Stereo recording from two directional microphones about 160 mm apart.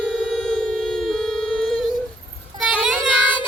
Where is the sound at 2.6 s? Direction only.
5° right (ahead or behind).